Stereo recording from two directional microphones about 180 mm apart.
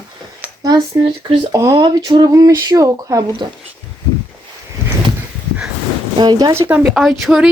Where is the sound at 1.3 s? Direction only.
30° right (ahead or behind).